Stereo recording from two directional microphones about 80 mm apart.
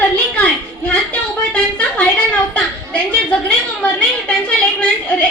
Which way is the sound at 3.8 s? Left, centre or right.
Centre.